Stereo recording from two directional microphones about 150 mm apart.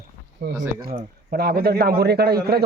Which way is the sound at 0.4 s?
90° right.